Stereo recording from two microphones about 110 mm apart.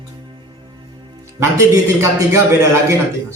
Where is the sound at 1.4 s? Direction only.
30° right (ahead or behind).